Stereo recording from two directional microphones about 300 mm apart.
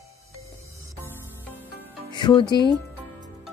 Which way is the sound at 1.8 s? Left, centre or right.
Centre.